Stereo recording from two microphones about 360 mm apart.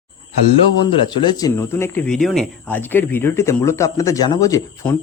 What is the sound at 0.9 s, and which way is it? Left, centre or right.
Speech, centre.